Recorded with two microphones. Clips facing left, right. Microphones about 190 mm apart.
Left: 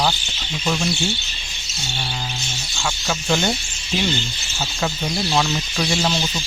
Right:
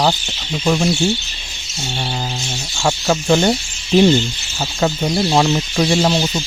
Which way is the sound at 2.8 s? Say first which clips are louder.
Right 8 dB; 45° right (ahead or behind).